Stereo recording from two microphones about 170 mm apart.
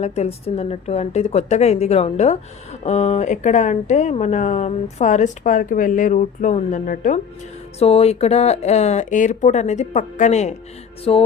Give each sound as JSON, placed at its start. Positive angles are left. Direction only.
{"t": 0.0, "sound": "speech", "side_deg": 40}
{"t": 7.8, "sound": "speech", "side_deg": 35}
{"t": 11.1, "sound": "speech", "side_deg": 35}